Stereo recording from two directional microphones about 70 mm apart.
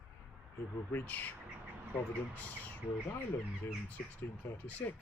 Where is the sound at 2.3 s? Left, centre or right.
Left.